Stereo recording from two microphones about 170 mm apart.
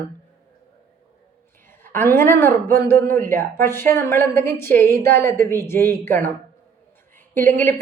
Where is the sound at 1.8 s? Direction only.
15° left (ahead or behind).